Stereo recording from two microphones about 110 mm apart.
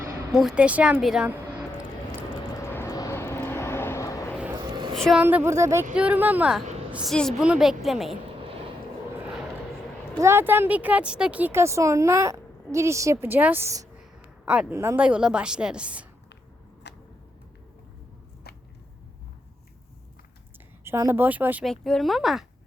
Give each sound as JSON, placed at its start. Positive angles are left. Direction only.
{"t": 0.3, "sound": "a woman's voice", "side_deg": -5}
{"t": 2.6, "sound": "a sound", "side_deg": 20}
{"t": 2.9, "sound": "vehicle", "side_deg": 35}
{"t": 3.2, "sound": "vehicle", "side_deg": 20}
{"t": 4.5, "sound": "a sound", "side_deg": -40}
{"t": 5.2, "sound": "speech", "side_deg": -20}
{"t": 5.9, "sound": "a woman's voice", "side_deg": -10}
{"t": 7.1, "sound": "speech", "side_deg": 5}
{"t": 7.4, "sound": "speech", "side_deg": -5}
{"t": 10.2, "sound": "speech", "side_deg": -25}
{"t": 14.0, "sound": "a sound", "side_deg": -10}
{"t": 15.0, "sound": "a woman's voice", "side_deg": -10}
{"t": 20.8, "sound": "speech", "side_deg": -25}
{"t": 21.6, "sound": "speech", "side_deg": 5}